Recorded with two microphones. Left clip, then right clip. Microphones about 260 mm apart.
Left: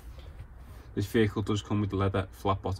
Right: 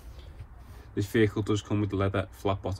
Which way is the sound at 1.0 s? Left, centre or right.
Left.